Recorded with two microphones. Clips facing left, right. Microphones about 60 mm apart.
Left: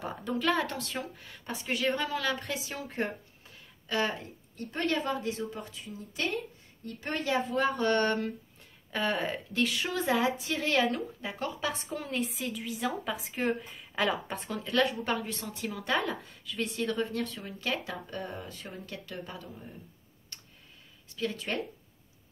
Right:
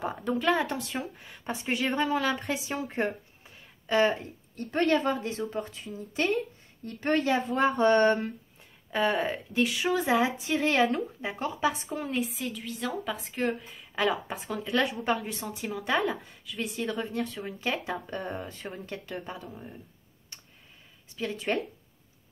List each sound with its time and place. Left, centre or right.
0.4 s speech: centre; by 4.2 s right
4.6 s speech: right
4.9 s a woman's voice: right
7.5 s a woman's voice: right
11.9 s a woman's voice: centre
18.1 s speech: right
20.3 s clicking: centre
21.2 s speech: right